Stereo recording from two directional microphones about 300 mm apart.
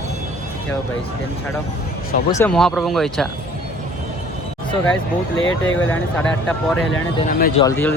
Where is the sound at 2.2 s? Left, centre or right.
Centre.